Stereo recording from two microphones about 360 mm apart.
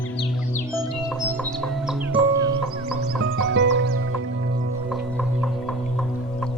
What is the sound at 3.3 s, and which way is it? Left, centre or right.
Music, right.